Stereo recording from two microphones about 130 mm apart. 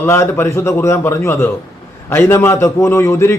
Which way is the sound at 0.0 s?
15° left (ahead or behind).